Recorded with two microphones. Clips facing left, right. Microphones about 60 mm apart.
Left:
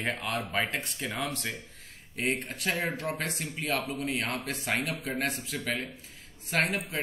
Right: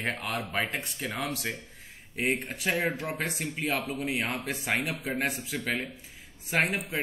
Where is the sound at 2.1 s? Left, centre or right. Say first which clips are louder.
Right 2 dB; centre.